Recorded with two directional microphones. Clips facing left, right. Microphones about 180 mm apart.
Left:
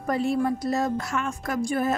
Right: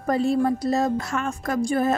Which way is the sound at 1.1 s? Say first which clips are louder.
Right 2 dB; 40° right (ahead or behind).